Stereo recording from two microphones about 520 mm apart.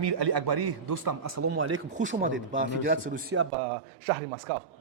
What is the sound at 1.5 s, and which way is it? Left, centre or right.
A man's voice, centre.